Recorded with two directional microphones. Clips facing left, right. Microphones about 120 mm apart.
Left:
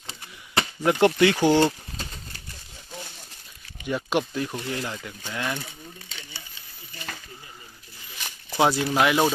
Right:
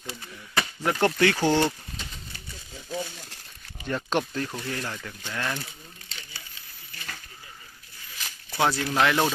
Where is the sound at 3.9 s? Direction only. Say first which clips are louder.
Left 2 dB; 10° left (ahead or behind).